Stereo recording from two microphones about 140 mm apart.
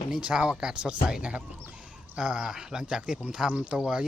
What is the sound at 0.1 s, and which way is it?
Speech, 5° right (ahead or behind).